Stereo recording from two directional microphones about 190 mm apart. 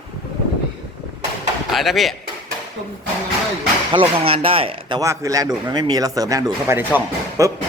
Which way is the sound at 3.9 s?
30° right (ahead or behind).